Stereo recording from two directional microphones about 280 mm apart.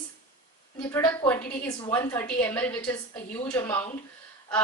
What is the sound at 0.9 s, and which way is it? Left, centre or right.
A woman's voice, centre.